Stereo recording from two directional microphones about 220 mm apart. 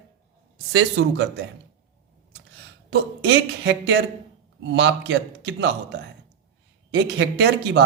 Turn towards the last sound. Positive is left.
turn(degrees=-50)  # may be behind; listen again after turning